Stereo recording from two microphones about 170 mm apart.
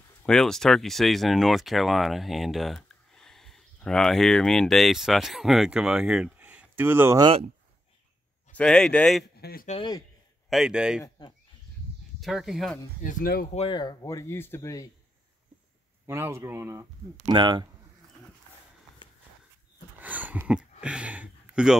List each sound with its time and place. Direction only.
0.2 s speech: 5° left (ahead or behind); by 7.2 s 15° right (ahead or behind)
7.2 s speech: 35° right (ahead or behind)
8.5 s speech: 5° left (ahead or behind)
9.4 s speech: 60° left (ahead or behind)
10.5 s speech: 5° right (ahead or behind)
12.2 s speech: centre (ahead or behind)
13.0 s speech: 55° left (ahead or behind)
13.6 s speech: 30° left (ahead or behind)
16.1 s speech: 15° right (ahead or behind)
17.3 s speech: 25° right (ahead or behind)
20.0 s a sound: 10° right (ahead or behind)